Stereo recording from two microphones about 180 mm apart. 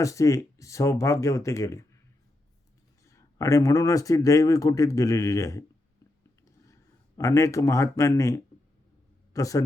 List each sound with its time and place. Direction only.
0.0 s speech: 15° left (ahead or behind)
3.1 s speech: 15° left (ahead or behind)
7.2 s a man's voice: 15° left (ahead or behind)